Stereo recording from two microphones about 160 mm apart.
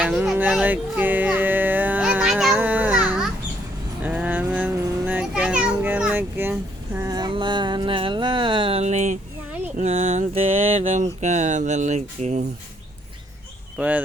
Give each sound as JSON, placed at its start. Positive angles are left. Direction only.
{"t": 0.0, "sound": "music", "side_deg": -5}
{"t": 4.0, "sound": "a sound", "side_deg": -10}
{"t": 13.7, "sound": "speech", "side_deg": -10}